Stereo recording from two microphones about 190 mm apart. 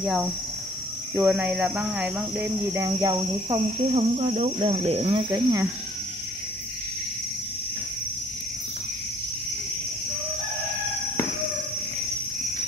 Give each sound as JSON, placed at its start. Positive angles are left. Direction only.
{"t": 0.0, "sound": "speech", "side_deg": -5}
{"t": 5.3, "sound": "speech", "side_deg": -15}